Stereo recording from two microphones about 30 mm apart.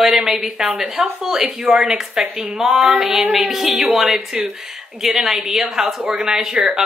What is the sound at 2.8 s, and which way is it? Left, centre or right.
A woman's voice, centre.